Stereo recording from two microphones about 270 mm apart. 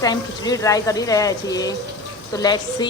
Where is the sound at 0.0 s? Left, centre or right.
Centre.